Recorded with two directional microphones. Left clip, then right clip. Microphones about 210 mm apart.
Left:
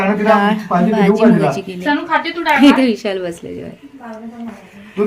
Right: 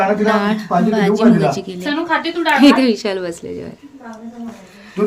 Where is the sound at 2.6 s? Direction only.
Centre (ahead or behind).